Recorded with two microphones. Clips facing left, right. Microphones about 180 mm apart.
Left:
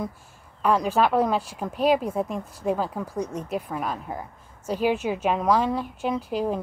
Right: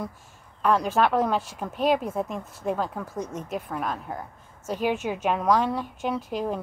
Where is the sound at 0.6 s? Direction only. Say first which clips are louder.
Left 1 dB; 10° left (ahead or behind).